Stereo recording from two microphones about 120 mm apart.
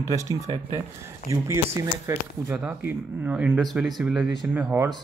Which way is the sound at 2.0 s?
20° right (ahead or behind).